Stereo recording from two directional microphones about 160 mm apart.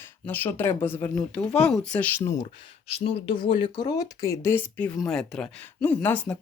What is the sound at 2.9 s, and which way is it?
Speech, 35° left (ahead or behind).